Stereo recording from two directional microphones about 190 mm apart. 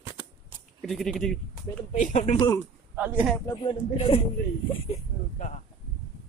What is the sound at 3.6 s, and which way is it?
Speech, 30° left (ahead or behind).